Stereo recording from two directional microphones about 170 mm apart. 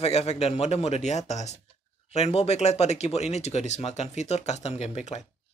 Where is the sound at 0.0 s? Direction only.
40° left (ahead or behind).